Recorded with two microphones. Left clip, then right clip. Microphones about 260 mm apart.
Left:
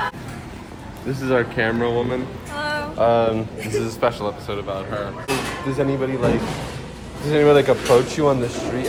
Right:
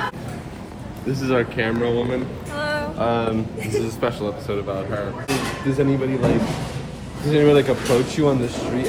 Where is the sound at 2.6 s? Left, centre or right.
Centre.